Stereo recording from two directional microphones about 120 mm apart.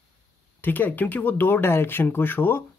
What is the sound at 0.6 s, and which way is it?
Speech, 15° left (ahead or behind).